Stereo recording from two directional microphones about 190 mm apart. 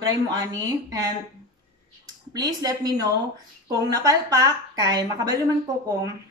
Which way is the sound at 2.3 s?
20° right (ahead or behind).